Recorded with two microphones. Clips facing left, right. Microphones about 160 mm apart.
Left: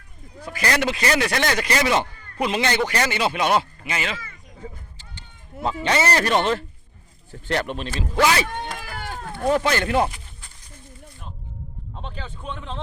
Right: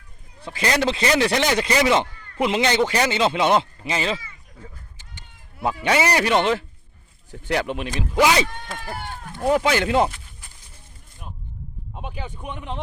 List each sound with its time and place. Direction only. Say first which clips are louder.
0.4 s speech: right 1 dB; 25° right (ahead or behind)
5.6 s speech: right 1 dB; 10° right (ahead or behind)
9.0 s a sound: left 2 dB; 90° left
9.3 s speech: right 1 dB; 15° right (ahead or behind)
11.9 s speech: right 2 dB; 10° right (ahead or behind)